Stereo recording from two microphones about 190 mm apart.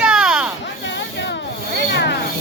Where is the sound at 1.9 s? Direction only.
65° left (ahead or behind).